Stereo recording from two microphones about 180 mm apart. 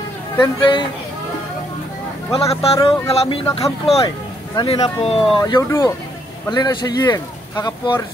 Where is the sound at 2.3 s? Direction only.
30° left (ahead or behind).